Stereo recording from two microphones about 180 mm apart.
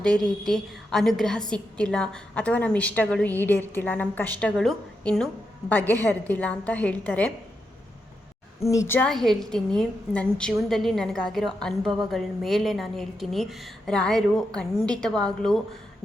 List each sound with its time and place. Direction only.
0.0 s a woman's voice: 5° left (ahead or behind)
8.6 s a woman's voice: 15° left (ahead or behind)
9.0 s a woman's voice: centre (ahead or behind)